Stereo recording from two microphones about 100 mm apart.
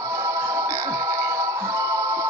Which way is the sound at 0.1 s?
35° right (ahead or behind).